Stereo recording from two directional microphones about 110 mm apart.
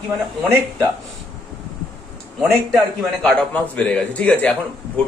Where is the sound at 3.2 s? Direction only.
15° left (ahead or behind).